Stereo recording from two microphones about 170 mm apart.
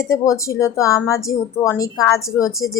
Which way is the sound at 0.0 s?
15° left (ahead or behind).